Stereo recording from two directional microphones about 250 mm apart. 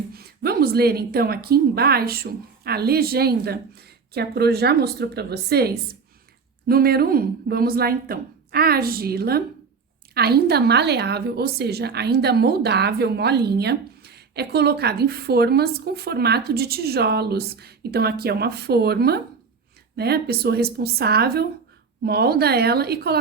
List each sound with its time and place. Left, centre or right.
0.1 s a woman's voice: right